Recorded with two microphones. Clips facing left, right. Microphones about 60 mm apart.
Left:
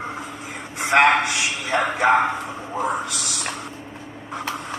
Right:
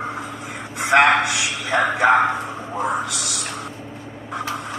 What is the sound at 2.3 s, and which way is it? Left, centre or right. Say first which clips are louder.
Speech: right 2 dB; centre.